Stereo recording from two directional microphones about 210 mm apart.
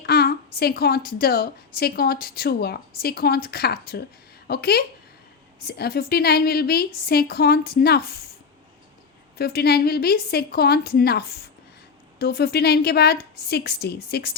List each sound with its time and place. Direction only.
0.0 s a woman's voice: 50° left (ahead or behind)
9.4 s a woman's voice: 50° left (ahead or behind)